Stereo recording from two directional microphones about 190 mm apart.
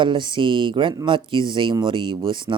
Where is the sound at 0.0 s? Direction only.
25° right (ahead or behind).